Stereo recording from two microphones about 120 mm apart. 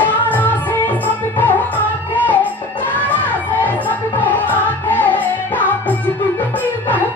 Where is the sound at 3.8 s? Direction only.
15° left (ahead or behind).